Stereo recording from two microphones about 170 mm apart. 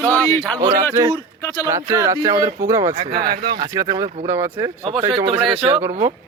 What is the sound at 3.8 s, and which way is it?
Speech, 20° right (ahead or behind).